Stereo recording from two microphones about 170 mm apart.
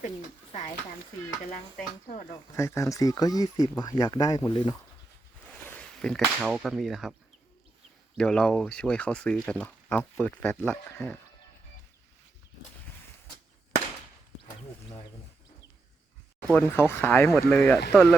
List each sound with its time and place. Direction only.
2.6 s speech: 15° left (ahead or behind)
5.6 s speech: 5° left (ahead or behind)
8.2 s speech: 5° left (ahead or behind)
16.5 s speech: 10° left (ahead or behind)